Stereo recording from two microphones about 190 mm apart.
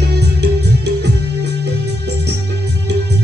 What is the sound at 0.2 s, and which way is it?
Music, 60° right (ahead or behind).